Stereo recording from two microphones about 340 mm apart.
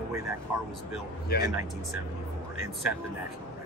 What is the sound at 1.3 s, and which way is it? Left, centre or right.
Speech, left.